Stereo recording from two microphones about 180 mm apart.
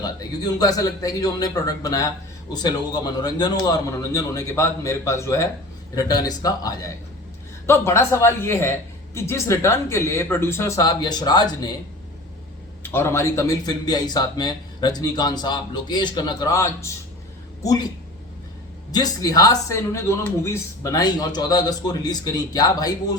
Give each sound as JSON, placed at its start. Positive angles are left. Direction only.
{"t": 0.0, "sound": "speech", "side_deg": 20}
{"t": 12.8, "sound": "speech", "side_deg": 15}
{"t": 18.9, "sound": "speech", "side_deg": 20}